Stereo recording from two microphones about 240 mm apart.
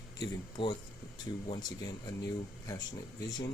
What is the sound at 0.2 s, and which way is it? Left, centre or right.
Speech, centre.